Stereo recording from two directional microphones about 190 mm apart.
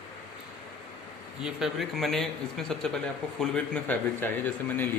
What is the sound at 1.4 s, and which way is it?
A man's voice, centre (ahead or behind).